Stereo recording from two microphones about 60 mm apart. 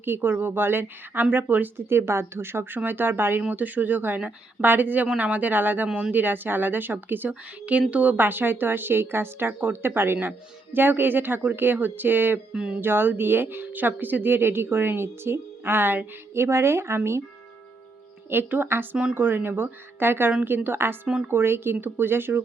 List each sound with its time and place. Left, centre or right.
0.0 s a woman's voice: right
1.9 s a woman's voice: right
12.5 s speech: centre
12.8 s a woman's voice: right
16.3 s speech: right
18.3 s a woman's voice: right